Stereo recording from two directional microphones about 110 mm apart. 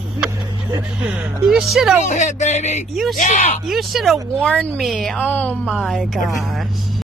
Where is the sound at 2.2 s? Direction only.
90° left.